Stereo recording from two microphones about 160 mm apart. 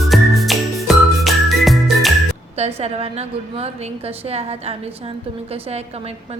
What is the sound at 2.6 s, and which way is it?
A woman's voice, 40° right (ahead or behind).